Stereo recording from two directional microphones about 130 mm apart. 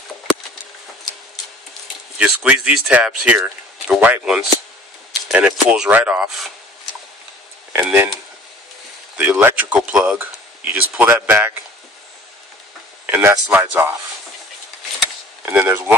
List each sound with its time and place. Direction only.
2.1 s speech: 10° right (ahead or behind)
7.7 s speech: 15° right (ahead or behind)
9.1 s speech: 10° right (ahead or behind)
13.0 s a sound: 15° right (ahead or behind)
13.5 s speech: 15° right (ahead or behind)
15.4 s speech: 15° right (ahead or behind)